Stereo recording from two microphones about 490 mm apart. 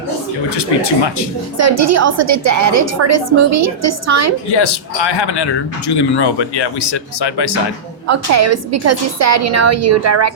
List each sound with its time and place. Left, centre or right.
0.5 s speech: left
1.5 s a woman's voice: right
4.5 s speech: left
8.0 s a woman's voice: right